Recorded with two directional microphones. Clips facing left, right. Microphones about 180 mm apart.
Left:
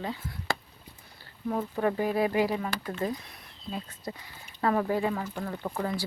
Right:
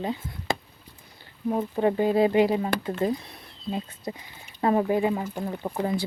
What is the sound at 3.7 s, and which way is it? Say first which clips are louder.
Speech: right 5 dB; 20° right (ahead or behind).